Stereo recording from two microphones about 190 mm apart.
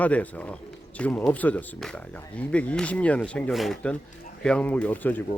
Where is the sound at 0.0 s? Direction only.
10° left (ahead or behind).